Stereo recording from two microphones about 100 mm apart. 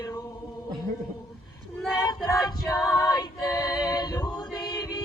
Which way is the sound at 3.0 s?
40° left (ahead or behind).